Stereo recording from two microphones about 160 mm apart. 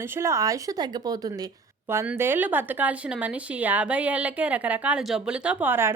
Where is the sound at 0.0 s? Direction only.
15° right (ahead or behind).